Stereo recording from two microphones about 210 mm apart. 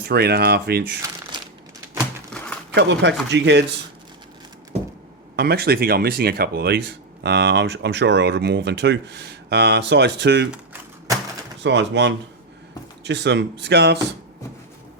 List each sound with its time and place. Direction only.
0.0 s speech: 50° right (ahead or behind)
2.3 s a sound: 5° left (ahead or behind)
2.7 s speech: 55° right (ahead or behind)
5.4 s speech: 50° right (ahead or behind)
11.6 s speech: 55° right (ahead or behind)